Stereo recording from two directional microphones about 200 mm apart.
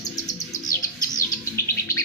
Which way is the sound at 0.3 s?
20° left (ahead or behind).